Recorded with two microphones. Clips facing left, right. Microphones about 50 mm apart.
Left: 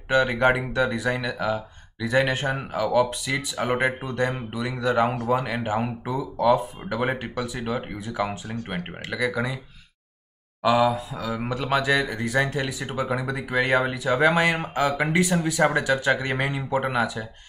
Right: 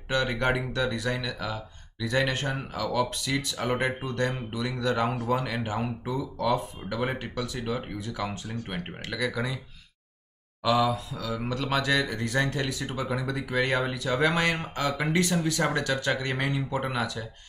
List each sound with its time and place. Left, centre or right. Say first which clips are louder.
0.1 s speech: left 6 dB; centre
10.6 s speech: left 4 dB; centre